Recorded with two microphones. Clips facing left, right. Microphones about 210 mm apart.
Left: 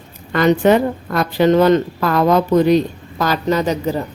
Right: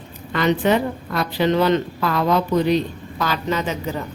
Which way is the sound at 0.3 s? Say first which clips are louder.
Left 5 dB; 45° left (ahead or behind).